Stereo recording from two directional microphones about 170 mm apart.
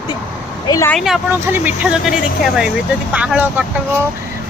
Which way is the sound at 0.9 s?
Centre (ahead or behind).